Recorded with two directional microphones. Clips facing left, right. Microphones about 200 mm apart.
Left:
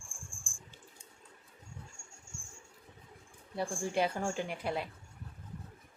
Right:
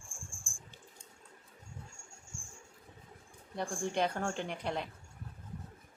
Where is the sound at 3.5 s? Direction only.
5° left (ahead or behind).